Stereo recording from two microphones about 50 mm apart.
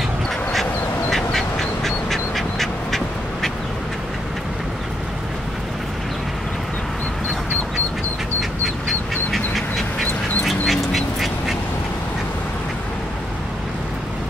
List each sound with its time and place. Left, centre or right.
1.1 s quack: centre
8.4 s duck: centre